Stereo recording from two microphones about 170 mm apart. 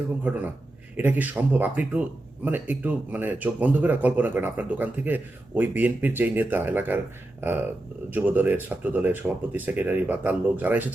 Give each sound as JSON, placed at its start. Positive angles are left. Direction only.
{"t": 0.2, "sound": "speech", "side_deg": -10}
{"t": 8.1, "sound": "speech", "side_deg": -10}